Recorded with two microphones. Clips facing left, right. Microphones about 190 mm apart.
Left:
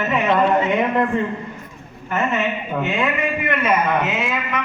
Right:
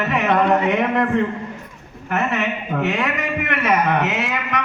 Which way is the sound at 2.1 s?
70° right (ahead or behind).